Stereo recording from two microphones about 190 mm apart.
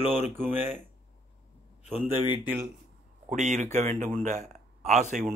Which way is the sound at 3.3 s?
40° right (ahead or behind).